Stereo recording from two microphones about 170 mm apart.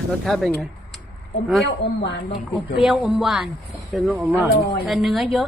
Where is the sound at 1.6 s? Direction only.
80° left.